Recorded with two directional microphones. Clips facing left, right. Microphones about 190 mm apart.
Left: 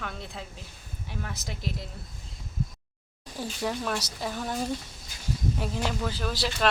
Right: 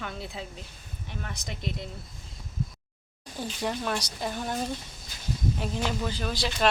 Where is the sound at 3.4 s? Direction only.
Centre (ahead or behind).